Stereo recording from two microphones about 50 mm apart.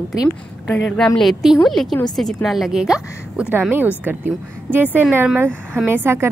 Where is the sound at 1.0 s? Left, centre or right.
Centre.